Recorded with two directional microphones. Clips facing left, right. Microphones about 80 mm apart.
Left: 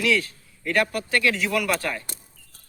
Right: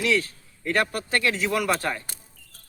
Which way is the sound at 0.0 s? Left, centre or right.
Right.